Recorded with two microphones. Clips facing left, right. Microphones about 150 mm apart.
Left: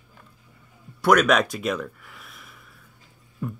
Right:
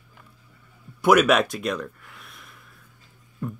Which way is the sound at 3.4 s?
Centre (ahead or behind).